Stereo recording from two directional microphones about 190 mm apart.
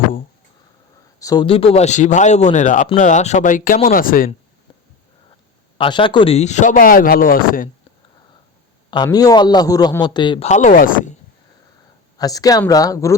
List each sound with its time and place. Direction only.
1.2 s a man's voice: 20° left (ahead or behind); by 4.3 s 50° left (ahead or behind)
5.7 s speech: 25° left (ahead or behind); by 7.7 s 50° left (ahead or behind)
9.0 s a man's voice: 20° left (ahead or behind)
10.5 s speech: 40° left (ahead or behind)
12.1 s a man's voice: 20° left (ahead or behind)